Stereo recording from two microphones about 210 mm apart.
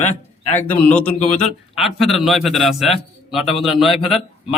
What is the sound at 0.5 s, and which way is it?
Speech, 5° left (ahead or behind).